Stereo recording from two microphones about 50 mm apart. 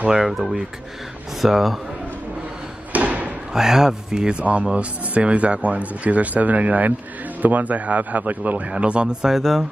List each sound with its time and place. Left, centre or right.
0.1 s speech: centre
2.9 s thump: right
3.5 s speech: centre
9.3 s speech: centre